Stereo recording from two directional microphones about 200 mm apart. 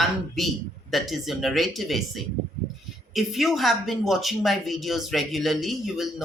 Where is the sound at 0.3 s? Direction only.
Centre (ahead or behind).